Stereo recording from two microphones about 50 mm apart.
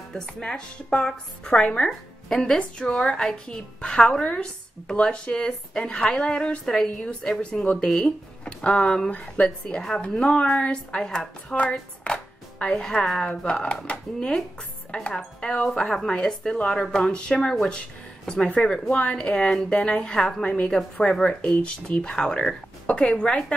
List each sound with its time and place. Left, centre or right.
0.1 s a woman's voice: centre
6.6 s a woman's voice: centre
9.1 s speech: left
9.7 s a woman's voice: centre
12.0 s music: left
13.2 s a woman's voice: centre